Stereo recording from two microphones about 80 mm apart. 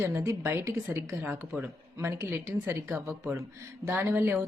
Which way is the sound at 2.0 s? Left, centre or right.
Right.